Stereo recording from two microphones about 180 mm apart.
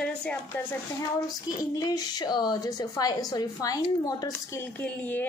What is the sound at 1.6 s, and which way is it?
A woman's voice, 20° left (ahead or behind).